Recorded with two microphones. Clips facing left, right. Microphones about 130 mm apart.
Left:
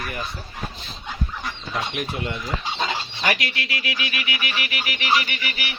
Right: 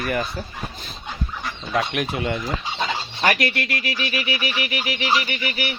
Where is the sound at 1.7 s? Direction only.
75° right (ahead or behind).